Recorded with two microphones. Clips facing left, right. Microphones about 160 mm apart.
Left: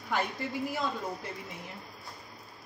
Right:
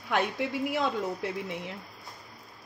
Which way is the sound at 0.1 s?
75° right (ahead or behind).